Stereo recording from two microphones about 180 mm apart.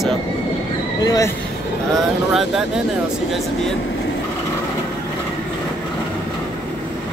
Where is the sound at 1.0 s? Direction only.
20° left (ahead or behind).